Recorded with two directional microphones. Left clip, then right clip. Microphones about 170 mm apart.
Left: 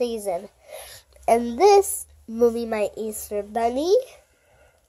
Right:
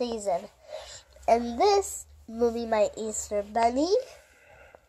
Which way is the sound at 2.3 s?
50° left (ahead or behind).